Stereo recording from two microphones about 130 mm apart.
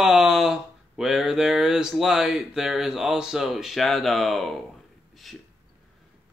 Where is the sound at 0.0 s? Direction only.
5° right (ahead or behind).